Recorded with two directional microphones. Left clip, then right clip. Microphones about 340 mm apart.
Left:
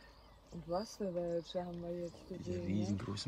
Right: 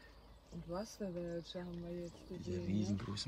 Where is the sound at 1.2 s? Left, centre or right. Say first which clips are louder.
Left 6 dB; left.